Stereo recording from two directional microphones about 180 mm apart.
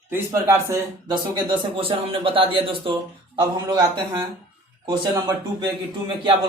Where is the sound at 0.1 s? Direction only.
15° right (ahead or behind).